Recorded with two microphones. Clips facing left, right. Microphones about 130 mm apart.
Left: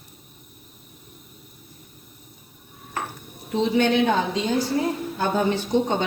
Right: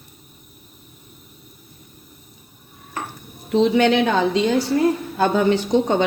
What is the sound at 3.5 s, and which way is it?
A woman's voice, 90° right.